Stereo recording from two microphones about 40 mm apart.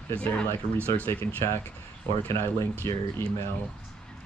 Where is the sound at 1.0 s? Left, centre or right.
Left.